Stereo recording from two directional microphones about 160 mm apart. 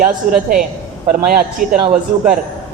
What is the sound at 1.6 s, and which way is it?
Speech, 55° right (ahead or behind).